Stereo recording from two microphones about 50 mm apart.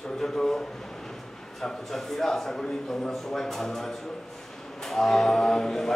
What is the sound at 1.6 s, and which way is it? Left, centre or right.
Speech, centre.